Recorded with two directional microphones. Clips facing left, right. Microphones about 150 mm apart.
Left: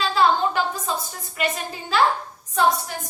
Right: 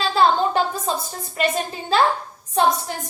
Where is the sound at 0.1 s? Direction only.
30° right (ahead or behind).